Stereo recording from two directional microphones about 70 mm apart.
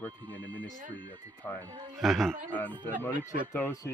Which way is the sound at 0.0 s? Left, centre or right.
Left.